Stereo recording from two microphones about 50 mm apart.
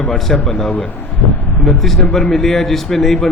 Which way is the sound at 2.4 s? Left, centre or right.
Centre.